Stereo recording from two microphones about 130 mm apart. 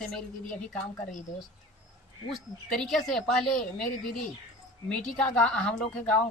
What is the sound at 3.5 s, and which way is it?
Speech, 90° left.